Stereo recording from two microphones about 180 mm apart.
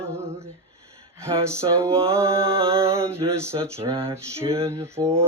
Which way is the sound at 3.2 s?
25° right (ahead or behind).